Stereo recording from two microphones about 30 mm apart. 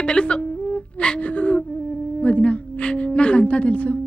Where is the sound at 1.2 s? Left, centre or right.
Left.